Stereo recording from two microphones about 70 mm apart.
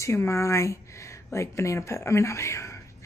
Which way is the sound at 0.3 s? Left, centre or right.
Left.